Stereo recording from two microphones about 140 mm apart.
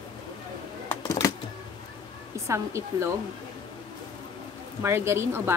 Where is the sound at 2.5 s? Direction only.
20° right (ahead or behind).